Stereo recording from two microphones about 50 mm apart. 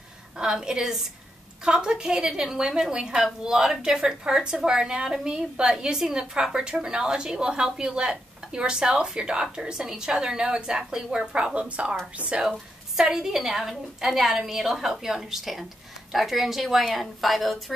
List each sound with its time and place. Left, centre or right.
0.4 s a woman's voice: centre
12.4 s a woman's voice: centre